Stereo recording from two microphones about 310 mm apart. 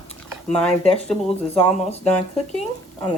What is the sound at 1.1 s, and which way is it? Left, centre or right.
Speech, centre.